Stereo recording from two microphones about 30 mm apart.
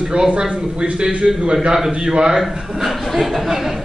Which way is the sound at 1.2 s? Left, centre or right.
Right.